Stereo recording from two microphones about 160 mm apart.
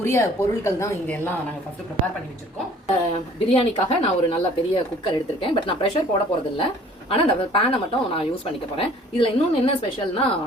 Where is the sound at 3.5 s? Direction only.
40° left (ahead or behind).